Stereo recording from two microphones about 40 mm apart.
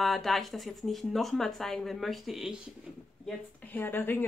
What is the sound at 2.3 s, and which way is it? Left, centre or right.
Speech, centre.